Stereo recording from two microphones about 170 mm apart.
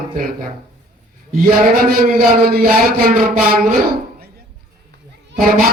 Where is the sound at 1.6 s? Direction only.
55° right (ahead or behind).